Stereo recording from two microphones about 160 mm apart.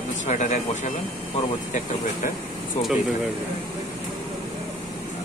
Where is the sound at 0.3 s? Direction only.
50° left (ahead or behind).